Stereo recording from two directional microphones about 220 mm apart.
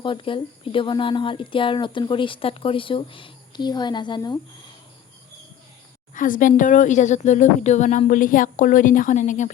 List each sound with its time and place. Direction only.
0.0 s speech: 25° left (ahead or behind)
6.1 s a woman's voice: 40° left (ahead or behind)